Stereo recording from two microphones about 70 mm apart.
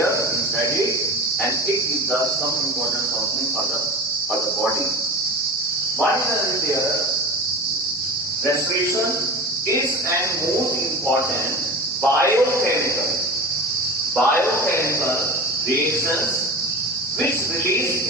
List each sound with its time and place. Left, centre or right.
12.3 s a man's voice: right
14.7 s speech: left